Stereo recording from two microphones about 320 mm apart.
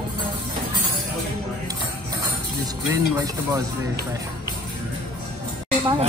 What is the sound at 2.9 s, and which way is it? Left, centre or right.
Speech, centre.